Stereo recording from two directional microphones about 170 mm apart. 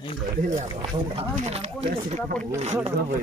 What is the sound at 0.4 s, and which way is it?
Speech, 45° right (ahead or behind).